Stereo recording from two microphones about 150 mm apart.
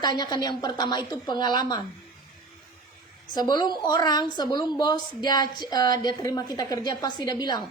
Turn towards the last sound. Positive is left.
turn(degrees=25)  # may be behind; listen again after turning